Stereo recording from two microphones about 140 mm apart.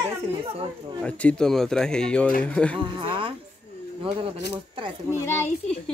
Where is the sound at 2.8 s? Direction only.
35° right (ahead or behind).